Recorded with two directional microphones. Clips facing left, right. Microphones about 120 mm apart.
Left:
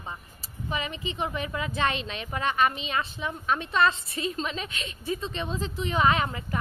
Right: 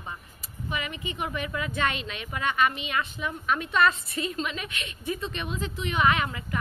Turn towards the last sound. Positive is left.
turn(degrees=30)  # may be behind; listen again after turning